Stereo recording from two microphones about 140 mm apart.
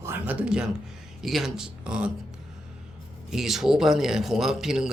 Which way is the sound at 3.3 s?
Centre (ahead or behind).